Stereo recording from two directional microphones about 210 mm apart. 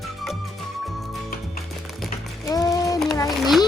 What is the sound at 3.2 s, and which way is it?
Speech, 15° left (ahead or behind).